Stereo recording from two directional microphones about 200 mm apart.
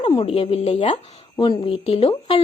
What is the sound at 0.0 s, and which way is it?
A woman's voice, 30° left (ahead or behind).